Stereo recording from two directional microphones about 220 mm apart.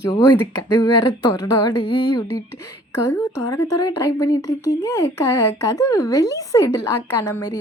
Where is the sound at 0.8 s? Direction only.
15° left (ahead or behind).